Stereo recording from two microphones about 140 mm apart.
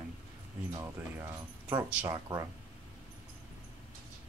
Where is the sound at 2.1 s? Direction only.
30° right (ahead or behind).